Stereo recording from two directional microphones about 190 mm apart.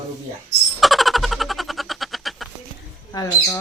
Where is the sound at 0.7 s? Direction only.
Centre (ahead or behind).